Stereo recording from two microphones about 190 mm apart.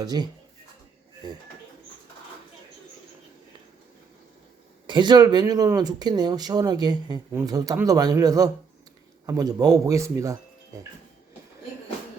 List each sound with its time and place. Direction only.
0.0 s speech: 20° right (ahead or behind)
4.9 s a man's voice: 25° right (ahead or behind)